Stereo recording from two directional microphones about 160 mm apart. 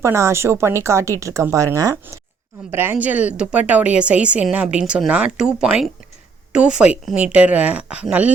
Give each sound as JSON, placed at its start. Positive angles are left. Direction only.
{"t": 0.0, "sound": "speech", "side_deg": -15}